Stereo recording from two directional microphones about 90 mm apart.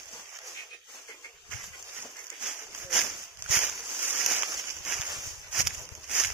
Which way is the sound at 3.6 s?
25° right (ahead or behind).